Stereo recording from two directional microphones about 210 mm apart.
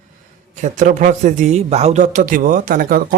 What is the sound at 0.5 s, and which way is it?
Speech, 35° right (ahead or behind).